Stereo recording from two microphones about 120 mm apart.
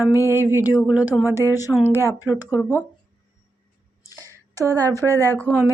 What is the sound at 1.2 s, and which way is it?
Speech, 25° left (ahead or behind).